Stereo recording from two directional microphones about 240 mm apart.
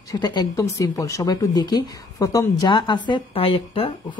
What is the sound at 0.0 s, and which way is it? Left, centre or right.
Speech, centre.